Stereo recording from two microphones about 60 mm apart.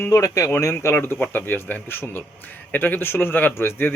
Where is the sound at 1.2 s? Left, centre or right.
Left.